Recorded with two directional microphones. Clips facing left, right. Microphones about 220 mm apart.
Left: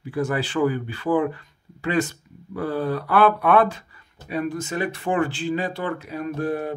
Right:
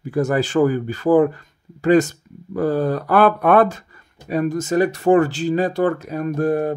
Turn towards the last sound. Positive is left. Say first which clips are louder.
# right 6 dB
turn(degrees=-45)  # may be behind; listen again after turning